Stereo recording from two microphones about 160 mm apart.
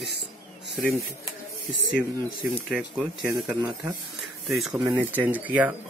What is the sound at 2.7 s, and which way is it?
Speech, 5° right (ahead or behind).